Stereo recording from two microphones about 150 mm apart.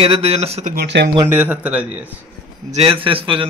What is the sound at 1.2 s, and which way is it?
Speech, 10° right (ahead or behind).